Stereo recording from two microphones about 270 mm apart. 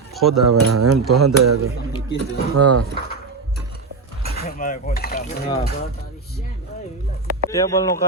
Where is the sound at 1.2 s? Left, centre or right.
Right.